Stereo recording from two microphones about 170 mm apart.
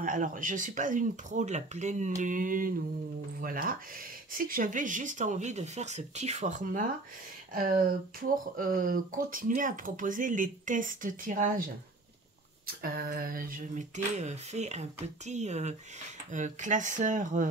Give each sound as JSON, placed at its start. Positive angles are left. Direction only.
{"t": 0.0, "sound": "speech", "side_deg": -50}